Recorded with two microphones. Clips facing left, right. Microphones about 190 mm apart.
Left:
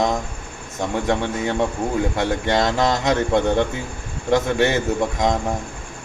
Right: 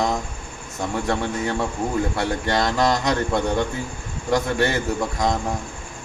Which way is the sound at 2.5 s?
20° left (ahead or behind).